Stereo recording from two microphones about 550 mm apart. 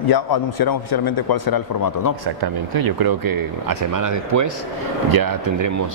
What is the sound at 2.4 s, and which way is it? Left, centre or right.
Speech, right.